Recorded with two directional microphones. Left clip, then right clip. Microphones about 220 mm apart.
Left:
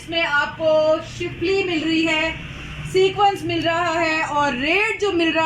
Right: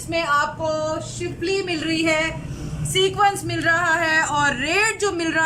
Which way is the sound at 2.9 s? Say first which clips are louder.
Left 2 dB; 15° left (ahead or behind).